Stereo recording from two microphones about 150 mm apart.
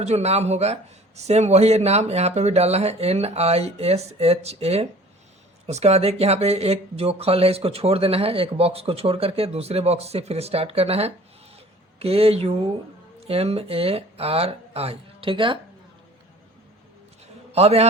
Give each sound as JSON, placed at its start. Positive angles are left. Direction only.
{"t": 0.0, "sound": "a man's voice", "side_deg": -45}
{"t": 17.5, "sound": "a man's voice", "side_deg": -45}